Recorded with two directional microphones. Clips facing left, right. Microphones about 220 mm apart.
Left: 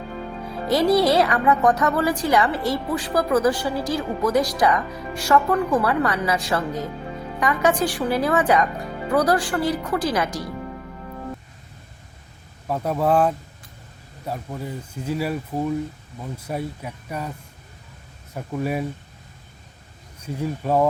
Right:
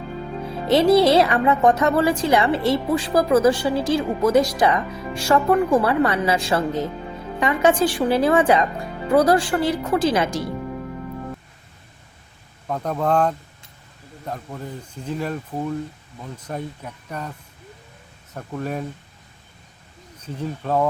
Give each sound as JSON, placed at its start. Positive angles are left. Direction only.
{"t": 0.7, "sound": "a woman's voice", "side_deg": -25}
{"t": 12.6, "sound": "speech", "side_deg": 5}
{"t": 18.3, "sound": "speech", "side_deg": 10}
{"t": 20.2, "sound": "speech", "side_deg": 10}